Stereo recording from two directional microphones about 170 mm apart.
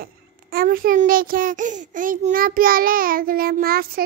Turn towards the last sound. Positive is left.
turn(degrees=-60)  # may be behind; listen again after turning